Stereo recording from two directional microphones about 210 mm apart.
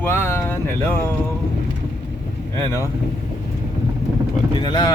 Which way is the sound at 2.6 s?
15° left (ahead or behind).